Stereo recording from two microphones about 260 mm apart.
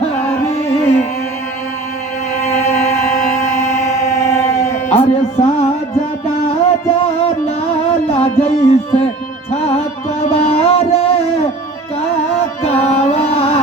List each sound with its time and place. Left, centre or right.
0.0 s music: left
4.9 s music: left
12.6 s carnatic music: left